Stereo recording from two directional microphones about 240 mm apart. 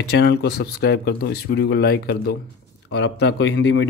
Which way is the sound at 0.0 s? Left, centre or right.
Left.